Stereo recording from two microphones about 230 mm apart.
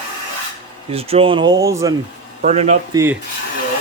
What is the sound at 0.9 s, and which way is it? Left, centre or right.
Speech, right.